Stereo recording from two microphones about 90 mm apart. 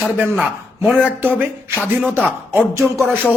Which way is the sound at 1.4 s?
20° right (ahead or behind).